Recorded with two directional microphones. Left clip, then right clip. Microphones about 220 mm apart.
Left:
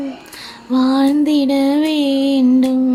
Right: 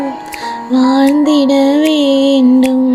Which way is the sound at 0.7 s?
10° right (ahead or behind).